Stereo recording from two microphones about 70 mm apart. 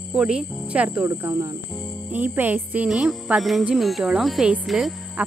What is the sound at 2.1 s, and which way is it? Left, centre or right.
Speech, right.